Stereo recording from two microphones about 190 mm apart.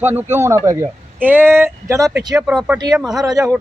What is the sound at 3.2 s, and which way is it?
Speech, 20° right (ahead or behind).